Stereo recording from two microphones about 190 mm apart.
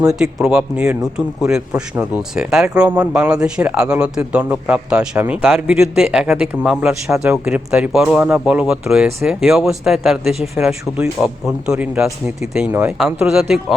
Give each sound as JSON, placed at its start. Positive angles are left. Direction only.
{"t": 0.2, "sound": "a man's voice", "side_deg": -5}